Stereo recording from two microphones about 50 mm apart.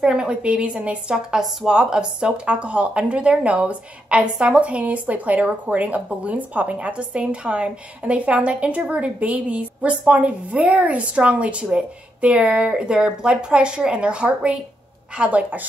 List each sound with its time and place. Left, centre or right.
0.0 s a woman's voice: centre
1.1 s a woman's voice: centre; by 15.6 s right